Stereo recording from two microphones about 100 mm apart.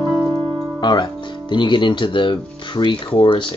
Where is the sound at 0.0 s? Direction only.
25° left (ahead or behind).